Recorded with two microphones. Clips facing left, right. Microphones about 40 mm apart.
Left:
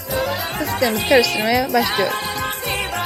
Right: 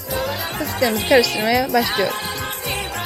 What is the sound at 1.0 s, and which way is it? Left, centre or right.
Speech, centre.